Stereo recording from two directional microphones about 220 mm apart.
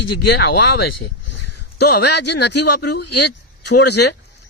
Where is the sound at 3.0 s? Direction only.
90° left.